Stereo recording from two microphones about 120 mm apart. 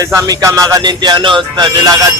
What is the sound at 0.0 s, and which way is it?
Music, 30° right (ahead or behind).